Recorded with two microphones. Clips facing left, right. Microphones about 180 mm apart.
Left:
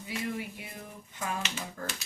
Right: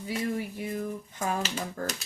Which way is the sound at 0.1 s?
40° right (ahead or behind).